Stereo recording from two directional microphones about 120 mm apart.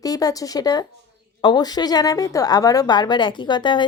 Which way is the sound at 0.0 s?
30° left (ahead or behind).